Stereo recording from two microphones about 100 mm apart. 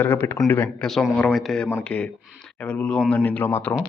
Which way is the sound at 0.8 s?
5° left (ahead or behind).